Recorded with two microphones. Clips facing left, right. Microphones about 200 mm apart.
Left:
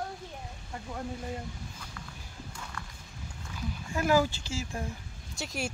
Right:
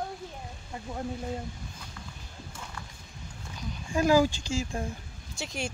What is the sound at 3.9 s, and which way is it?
Speech, 15° right (ahead or behind).